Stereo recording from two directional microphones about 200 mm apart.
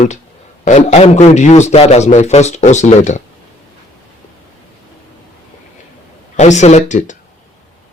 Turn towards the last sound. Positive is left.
turn(degrees=35)  # may be behind; listen again after turning